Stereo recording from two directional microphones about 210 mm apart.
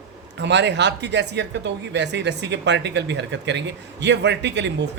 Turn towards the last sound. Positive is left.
turn(degrees=-55)  # may be behind; listen again after turning